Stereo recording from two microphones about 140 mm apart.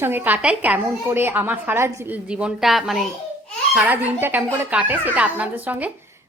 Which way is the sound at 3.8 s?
15° right (ahead or behind).